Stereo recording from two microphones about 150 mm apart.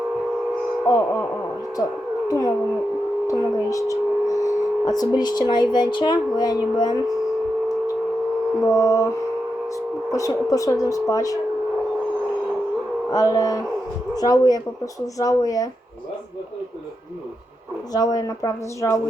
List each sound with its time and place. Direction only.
0.9 s speech: 20° left (ahead or behind)
8.6 s speech: 20° left (ahead or behind)
13.1 s speech: 25° left (ahead or behind)
17.9 s speech: 25° left (ahead or behind)